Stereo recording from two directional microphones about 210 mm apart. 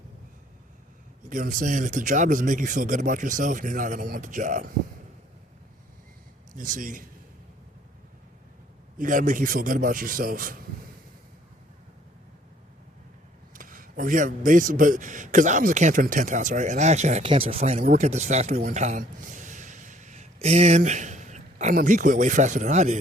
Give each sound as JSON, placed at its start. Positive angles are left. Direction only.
{"t": 1.3, "sound": "a man's voice", "side_deg": -40}
{"t": 6.6, "sound": "a man's voice", "side_deg": -40}
{"t": 9.0, "sound": "a man's voice", "side_deg": -40}
{"t": 13.5, "sound": "a man's voice", "side_deg": -40}